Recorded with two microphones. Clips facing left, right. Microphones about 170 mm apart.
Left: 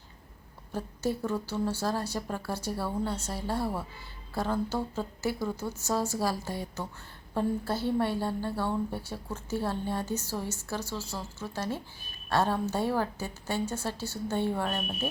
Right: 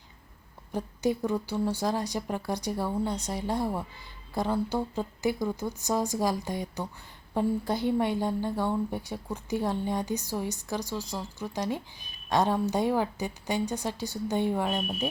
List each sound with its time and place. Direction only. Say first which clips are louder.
0.7 s a woman's voice: right 3 dB; 15° right (ahead or behind)